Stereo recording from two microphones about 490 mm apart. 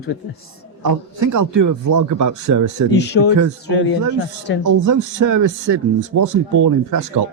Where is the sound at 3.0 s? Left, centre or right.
Left.